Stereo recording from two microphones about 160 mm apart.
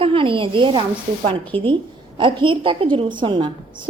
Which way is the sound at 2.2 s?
30° right (ahead or behind).